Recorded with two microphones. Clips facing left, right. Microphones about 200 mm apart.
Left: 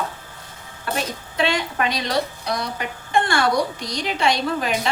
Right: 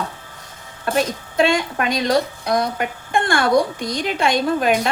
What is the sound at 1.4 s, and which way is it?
A woman's voice, 45° right (ahead or behind).